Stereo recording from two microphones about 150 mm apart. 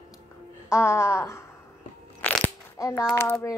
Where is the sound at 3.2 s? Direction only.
15° left (ahead or behind).